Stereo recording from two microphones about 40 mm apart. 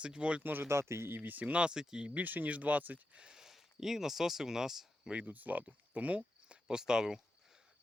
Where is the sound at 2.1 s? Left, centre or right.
Right.